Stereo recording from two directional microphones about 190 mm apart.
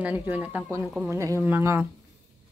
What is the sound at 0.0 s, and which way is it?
Speech, 10° right (ahead or behind).